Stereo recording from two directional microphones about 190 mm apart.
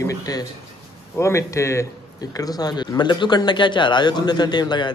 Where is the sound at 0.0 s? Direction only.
15° left (ahead or behind).